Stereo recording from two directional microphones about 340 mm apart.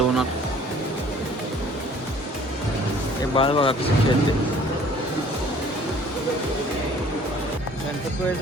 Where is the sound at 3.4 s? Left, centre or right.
Centre.